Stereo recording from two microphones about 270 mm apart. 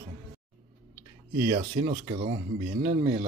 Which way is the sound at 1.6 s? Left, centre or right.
Right.